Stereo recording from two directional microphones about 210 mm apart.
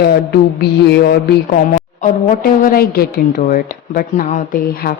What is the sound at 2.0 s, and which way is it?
A woman's voice, 40° left (ahead or behind).